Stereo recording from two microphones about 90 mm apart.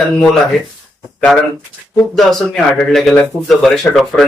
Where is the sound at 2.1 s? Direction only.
5° left (ahead or behind).